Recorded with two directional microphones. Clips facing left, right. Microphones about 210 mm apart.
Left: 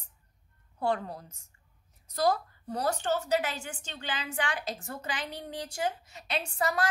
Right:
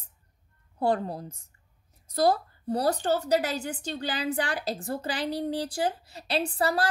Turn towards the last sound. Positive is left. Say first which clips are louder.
# right 4 dB
turn(degrees=-35)  # may be behind; listen again after turning